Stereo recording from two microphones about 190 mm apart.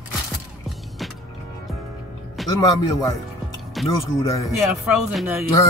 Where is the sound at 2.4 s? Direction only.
Centre (ahead or behind).